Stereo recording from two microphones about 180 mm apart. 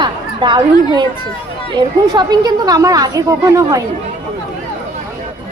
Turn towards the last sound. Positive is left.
turn(degrees=-15)  # may be behind; listen again after turning